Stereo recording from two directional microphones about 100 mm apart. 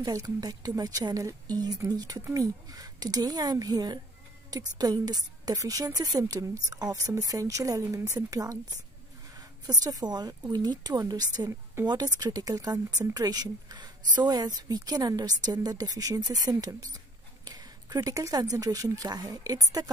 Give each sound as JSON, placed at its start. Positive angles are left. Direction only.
{"t": 0.0, "sound": "speech", "side_deg": -35}